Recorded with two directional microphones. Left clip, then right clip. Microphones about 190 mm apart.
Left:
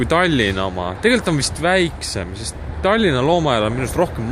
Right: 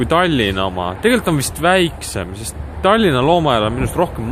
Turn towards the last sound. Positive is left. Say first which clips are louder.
# right 1 dB
turn(degrees=0)  # may be behind; listen again after turning